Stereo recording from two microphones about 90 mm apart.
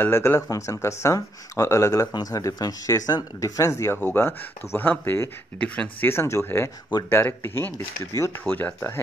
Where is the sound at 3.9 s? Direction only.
25° left (ahead or behind).